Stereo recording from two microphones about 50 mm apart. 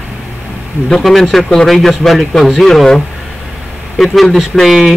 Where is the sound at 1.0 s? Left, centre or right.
Centre.